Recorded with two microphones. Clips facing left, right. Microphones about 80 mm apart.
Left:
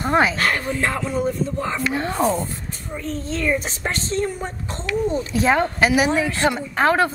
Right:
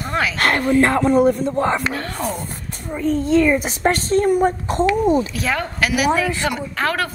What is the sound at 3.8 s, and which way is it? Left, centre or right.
Speech, right.